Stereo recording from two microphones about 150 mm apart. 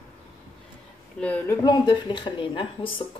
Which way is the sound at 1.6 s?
30° left (ahead or behind).